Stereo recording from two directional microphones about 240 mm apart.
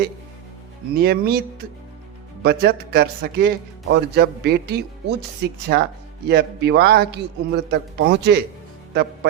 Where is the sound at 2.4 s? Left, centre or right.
Right.